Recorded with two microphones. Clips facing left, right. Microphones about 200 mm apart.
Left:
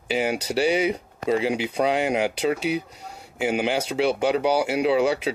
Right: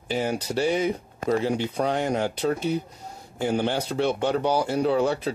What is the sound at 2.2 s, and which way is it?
Speech, 85° left.